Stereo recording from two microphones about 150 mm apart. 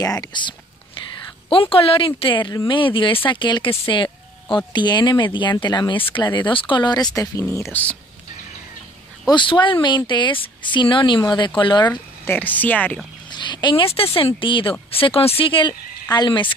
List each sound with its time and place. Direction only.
0.0 s speech: 25° left (ahead or behind)
9.3 s speech: 30° left (ahead or behind)
11.9 s speech: 10° left (ahead or behind)
13.3 s speech: 30° left (ahead or behind)